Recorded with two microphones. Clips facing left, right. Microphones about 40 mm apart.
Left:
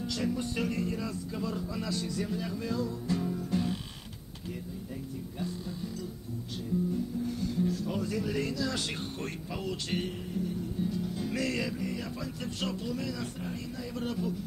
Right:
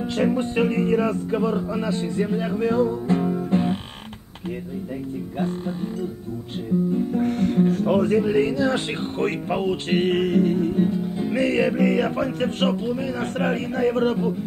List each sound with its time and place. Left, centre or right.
0.0 s speech: right
5.4 s speech: right
7.1 s speech: right
10.1 s music: right
10.9 s music: right
11.7 s speech: right
13.2 s speech: right